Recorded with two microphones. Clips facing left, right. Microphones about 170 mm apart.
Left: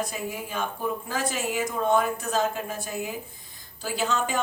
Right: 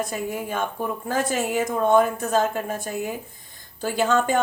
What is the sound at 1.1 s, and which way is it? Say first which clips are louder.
A woman's voice: right 9 dB; 50° right (ahead or behind).